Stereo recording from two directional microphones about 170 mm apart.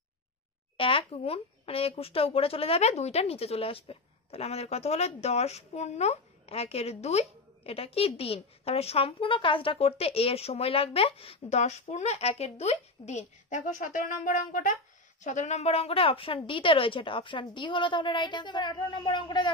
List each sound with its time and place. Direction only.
0.7 s a woman's voice: 30° left (ahead or behind)